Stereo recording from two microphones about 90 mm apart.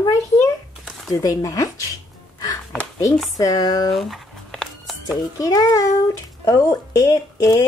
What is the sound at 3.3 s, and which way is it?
Speech, 40° left (ahead or behind).